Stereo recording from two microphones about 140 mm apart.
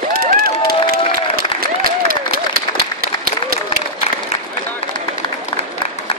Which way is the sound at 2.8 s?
90° right.